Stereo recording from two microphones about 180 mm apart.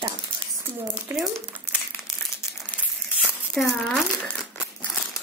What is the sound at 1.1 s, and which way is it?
Speech, 15° right (ahead or behind).